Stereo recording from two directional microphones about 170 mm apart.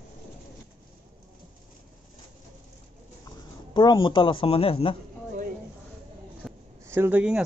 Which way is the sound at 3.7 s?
25° left (ahead or behind).